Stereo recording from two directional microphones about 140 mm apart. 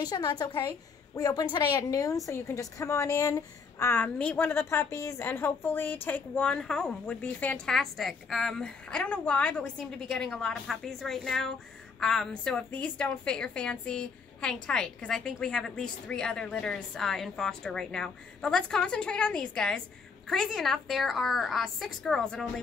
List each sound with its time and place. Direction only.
0.0 s a woman's voice: 30° left (ahead or behind); by 22.5 s 5° left (ahead or behind)